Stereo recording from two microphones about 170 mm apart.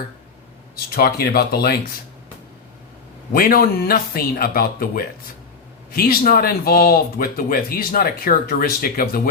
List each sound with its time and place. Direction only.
0.9 s speech: 65° left (ahead or behind)
3.3 s speech: 60° left (ahead or behind)